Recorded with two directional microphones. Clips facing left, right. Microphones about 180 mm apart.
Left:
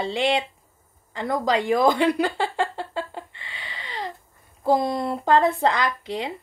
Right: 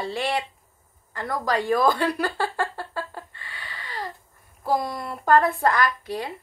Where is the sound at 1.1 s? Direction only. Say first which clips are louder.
Left 3 dB; 20° left (ahead or behind).